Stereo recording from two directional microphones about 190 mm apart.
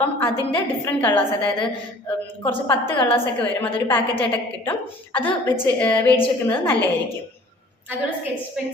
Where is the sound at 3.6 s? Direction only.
10° left (ahead or behind).